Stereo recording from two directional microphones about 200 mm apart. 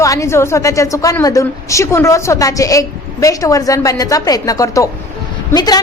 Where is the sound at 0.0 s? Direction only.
15° left (ahead or behind).